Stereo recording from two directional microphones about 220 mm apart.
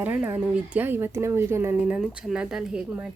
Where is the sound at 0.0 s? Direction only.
5° right (ahead or behind).